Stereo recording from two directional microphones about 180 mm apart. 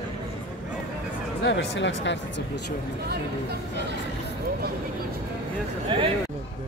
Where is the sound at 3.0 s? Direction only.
65° right (ahead or behind).